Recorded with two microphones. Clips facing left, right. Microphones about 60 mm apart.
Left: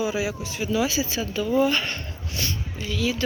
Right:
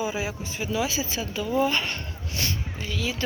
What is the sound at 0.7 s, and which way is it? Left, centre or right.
Speech, centre.